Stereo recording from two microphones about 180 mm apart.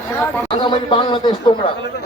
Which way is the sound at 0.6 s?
25° left (ahead or behind).